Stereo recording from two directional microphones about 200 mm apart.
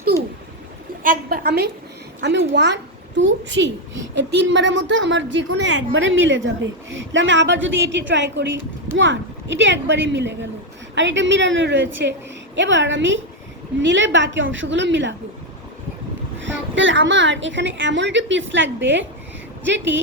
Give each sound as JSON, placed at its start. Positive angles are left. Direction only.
{"t": 1.0, "sound": "a woman's voice", "side_deg": -45}
{"t": 2.2, "sound": "a woman's voice", "side_deg": -65}
{"t": 16.4, "sound": "a woman's voice", "side_deg": -70}